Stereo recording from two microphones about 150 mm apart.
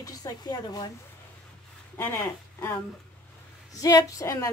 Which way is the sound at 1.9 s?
15° left (ahead or behind).